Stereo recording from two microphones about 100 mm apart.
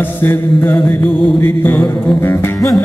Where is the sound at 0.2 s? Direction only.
20° left (ahead or behind).